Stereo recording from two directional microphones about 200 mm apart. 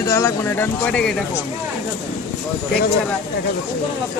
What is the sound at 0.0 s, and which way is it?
Speech, 15° left (ahead or behind).